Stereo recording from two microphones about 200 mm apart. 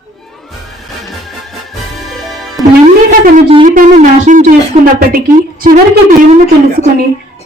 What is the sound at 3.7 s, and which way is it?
Music, 40° right (ahead or behind).